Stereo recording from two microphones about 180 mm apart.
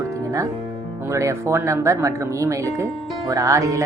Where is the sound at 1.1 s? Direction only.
15° right (ahead or behind).